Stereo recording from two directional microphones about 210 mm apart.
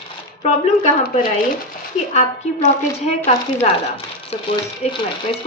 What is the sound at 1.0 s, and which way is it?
Speech, 40° left (ahead or behind).